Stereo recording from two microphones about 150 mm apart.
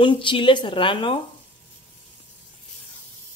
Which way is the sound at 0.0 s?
35° left (ahead or behind).